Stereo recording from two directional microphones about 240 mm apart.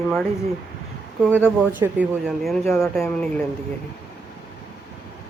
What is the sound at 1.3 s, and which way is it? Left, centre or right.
Speech, centre.